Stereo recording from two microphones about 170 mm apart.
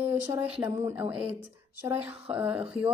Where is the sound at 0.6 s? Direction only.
15° right (ahead or behind).